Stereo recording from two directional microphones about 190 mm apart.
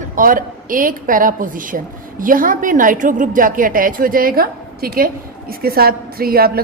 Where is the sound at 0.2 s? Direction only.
45° right (ahead or behind).